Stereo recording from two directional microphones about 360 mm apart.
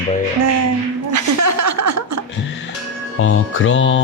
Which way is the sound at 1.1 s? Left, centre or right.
Right.